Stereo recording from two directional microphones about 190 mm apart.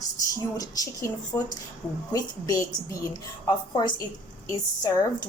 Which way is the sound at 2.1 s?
15° left (ahead or behind).